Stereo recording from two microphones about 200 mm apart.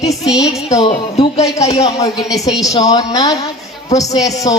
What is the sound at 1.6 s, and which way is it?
A man's voice, 20° left (ahead or behind).